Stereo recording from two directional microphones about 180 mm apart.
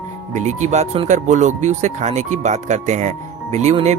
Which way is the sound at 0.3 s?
40° right (ahead or behind).